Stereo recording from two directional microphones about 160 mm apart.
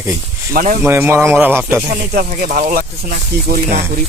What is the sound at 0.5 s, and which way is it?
Speech, 55° right (ahead or behind).